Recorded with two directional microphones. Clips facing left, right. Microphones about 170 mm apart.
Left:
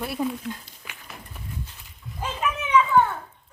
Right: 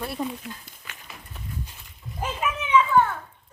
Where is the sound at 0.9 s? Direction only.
10° left (ahead or behind).